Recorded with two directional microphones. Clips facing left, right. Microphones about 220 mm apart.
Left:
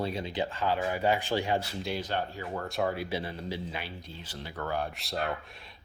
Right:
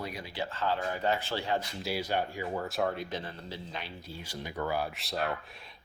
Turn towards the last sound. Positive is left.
turn(degrees=0)  # may be behind; listen again after turning